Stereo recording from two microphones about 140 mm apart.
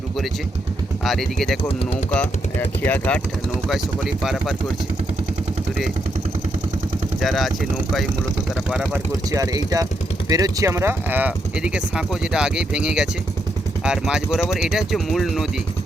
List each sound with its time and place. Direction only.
1.0 s speech: centre (ahead or behind)
2.1 s speech: 15° left (ahead or behind)
3.7 s speech: centre (ahead or behind)
7.2 s speech: centre (ahead or behind)
8.7 s speech: 5° right (ahead or behind)
9.3 s speech: 25° right (ahead or behind); by 15.4 s centre (ahead or behind)